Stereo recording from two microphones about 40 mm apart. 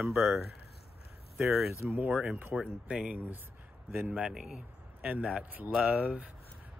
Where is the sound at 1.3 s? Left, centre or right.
Centre.